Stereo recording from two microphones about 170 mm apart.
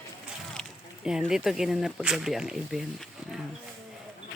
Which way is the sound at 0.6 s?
5° right (ahead or behind).